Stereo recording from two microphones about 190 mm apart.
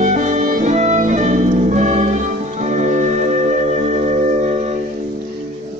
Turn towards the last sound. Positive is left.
turn(degrees=-40)  # may be behind; listen again after turning